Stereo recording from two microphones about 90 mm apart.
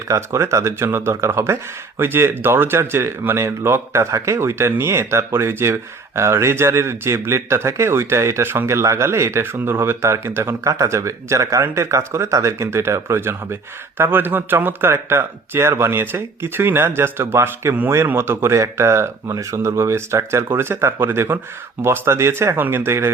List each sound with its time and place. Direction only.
0.1 s speech: 35° right (ahead or behind)
2.0 s speech: 25° right (ahead or behind)